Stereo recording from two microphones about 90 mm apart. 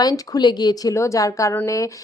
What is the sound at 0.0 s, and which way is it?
A woman's voice, 50° left (ahead or behind).